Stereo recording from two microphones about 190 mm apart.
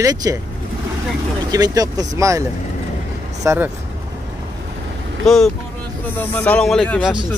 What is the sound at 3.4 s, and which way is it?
Speech, 10° right (ahead or behind).